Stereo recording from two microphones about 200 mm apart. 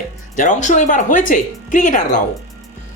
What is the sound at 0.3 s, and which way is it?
Speech, 40° left (ahead or behind).